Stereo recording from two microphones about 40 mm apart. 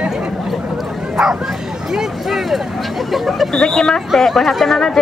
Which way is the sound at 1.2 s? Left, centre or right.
Centre.